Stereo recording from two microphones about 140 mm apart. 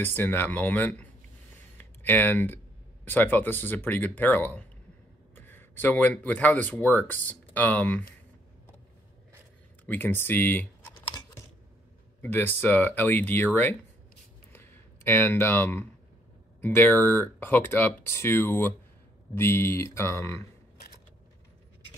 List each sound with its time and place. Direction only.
0.0 s speech: 15° left (ahead or behind)
9.8 s speech: 15° left (ahead or behind)
12.2 s speech: 15° left (ahead or behind)
14.5 s a sound: 15° left (ahead or behind)
16.6 s speech: 15° left (ahead or behind)